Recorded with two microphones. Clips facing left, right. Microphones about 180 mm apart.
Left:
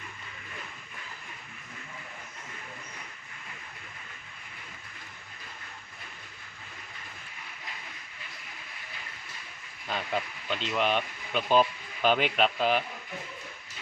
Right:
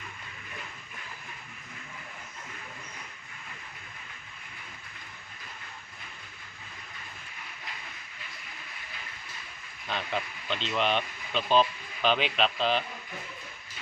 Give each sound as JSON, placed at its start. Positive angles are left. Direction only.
{"t": 9.8, "sound": "speech", "side_deg": 5}